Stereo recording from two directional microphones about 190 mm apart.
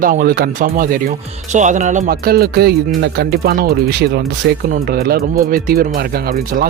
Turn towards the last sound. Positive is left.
turn(degrees=-50)  # may be behind; listen again after turning